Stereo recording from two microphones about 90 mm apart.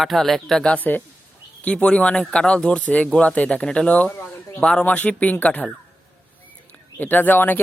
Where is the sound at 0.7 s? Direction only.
20° left (ahead or behind).